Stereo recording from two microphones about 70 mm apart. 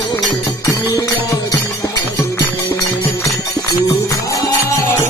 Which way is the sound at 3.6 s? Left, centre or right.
Left.